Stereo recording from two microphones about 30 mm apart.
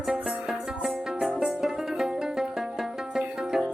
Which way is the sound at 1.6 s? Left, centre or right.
Centre.